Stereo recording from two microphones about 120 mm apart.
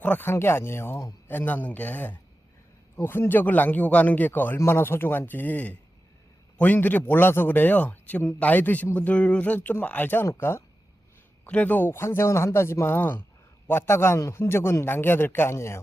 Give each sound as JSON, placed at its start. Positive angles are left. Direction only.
{"t": 0.0, "sound": "a man's voice", "side_deg": 15}